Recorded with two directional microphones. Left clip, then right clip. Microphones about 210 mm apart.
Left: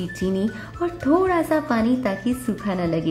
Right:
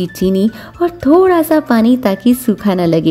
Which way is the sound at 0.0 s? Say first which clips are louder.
Right 10 dB; 45° right (ahead or behind).